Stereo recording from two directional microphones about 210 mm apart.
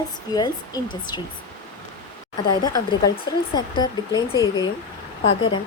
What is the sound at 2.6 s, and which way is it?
Speech, 20° left (ahead or behind).